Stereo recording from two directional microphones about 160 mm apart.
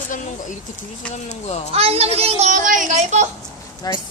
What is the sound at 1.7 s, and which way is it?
Speech, 40° right (ahead or behind).